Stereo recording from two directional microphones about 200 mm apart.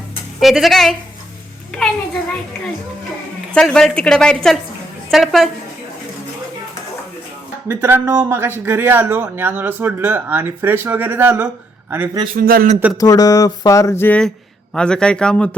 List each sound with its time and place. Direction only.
0.3 s a woman's voice: centre (ahead or behind)
3.5 s a woman's voice: 5° left (ahead or behind)
7.7 s speech: 10° right (ahead or behind)
12.4 s speech: 45° right (ahead or behind)
13.0 s a sound: 20° left (ahead or behind)
14.8 s a woman's voice: 5° left (ahead or behind)